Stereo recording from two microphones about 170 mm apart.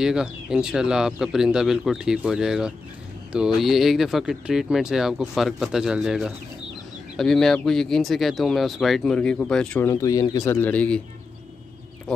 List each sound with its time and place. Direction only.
0.0 s speech: 5° right (ahead or behind)
9.8 s a man's voice: 20° left (ahead or behind)